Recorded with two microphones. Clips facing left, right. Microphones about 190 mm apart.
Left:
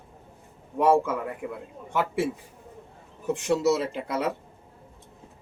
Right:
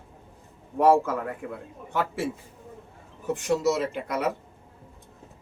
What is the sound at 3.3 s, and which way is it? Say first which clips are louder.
Speech: left 1 dB; 25° left (ahead or behind).